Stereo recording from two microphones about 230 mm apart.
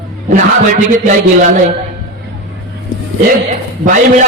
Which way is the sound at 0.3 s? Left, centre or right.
Right.